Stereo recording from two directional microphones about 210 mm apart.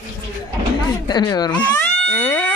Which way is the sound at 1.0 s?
20° left (ahead or behind).